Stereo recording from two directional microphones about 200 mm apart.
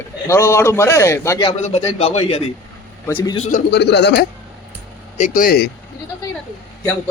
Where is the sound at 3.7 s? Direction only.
60° left (ahead or behind).